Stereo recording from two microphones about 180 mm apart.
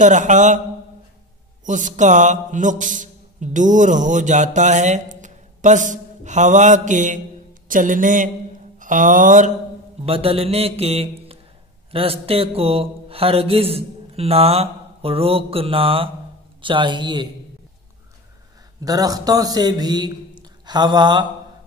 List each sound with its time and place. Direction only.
0.0 s mantra: 45° right (ahead or behind)
1.7 s mantra: 45° right (ahead or behind)
8.7 s a sound: 45° right (ahead or behind)
10.0 s a man's voice: 30° right (ahead or behind)
18.8 s a man's voice: 20° right (ahead or behind)